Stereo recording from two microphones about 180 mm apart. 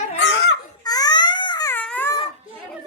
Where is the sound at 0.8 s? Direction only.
20° left (ahead or behind).